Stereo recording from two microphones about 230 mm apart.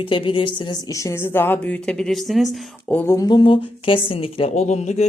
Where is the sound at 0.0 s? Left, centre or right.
Left.